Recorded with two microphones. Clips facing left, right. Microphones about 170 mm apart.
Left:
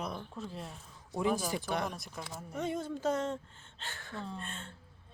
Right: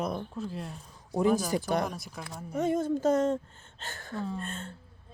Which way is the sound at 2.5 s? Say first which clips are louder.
Right 8 dB; 45° right (ahead or behind).